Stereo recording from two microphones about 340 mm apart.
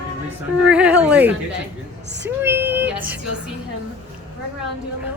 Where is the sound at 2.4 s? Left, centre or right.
Centre.